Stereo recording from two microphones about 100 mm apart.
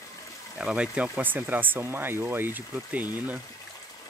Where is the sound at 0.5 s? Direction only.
10° right (ahead or behind).